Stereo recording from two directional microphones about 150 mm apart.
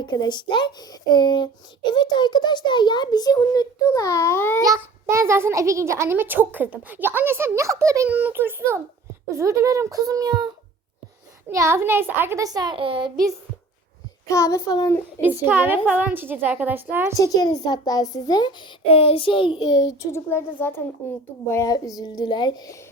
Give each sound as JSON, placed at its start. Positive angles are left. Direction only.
{"t": 0.0, "sound": "a child's voice", "side_deg": 30}
{"t": 4.6, "sound": "a child's voice", "side_deg": -20}
{"t": 14.3, "sound": "a child's voice", "side_deg": 20}
{"t": 15.2, "sound": "a child's voice", "side_deg": -15}
{"t": 17.2, "sound": "a child's voice", "side_deg": 25}